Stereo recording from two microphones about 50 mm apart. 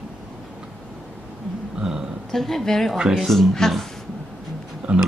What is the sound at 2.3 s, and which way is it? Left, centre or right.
Speech, centre.